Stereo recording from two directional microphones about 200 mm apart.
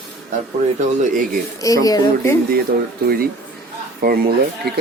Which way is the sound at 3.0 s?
50° right (ahead or behind).